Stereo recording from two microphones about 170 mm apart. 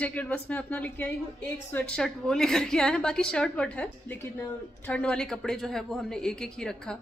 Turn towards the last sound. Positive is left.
turn(degrees=5)  # may be behind; listen again after turning